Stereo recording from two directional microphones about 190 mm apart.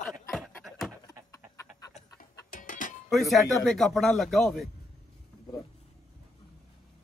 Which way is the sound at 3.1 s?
Centre (ahead or behind).